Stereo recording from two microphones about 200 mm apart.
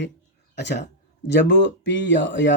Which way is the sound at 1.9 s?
65° left (ahead or behind).